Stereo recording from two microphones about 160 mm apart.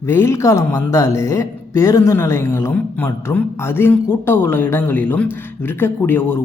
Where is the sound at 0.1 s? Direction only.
15° left (ahead or behind).